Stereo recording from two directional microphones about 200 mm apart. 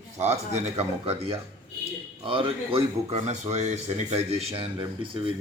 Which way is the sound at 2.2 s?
25° right (ahead or behind).